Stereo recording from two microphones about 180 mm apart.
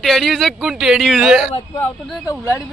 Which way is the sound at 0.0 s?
Centre (ahead or behind).